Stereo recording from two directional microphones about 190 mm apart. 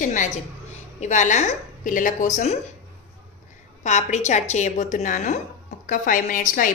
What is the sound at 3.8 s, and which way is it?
A woman's voice, 35° left (ahead or behind).